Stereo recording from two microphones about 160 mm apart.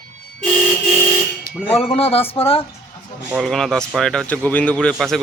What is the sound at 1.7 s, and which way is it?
Speech, 40° left (ahead or behind).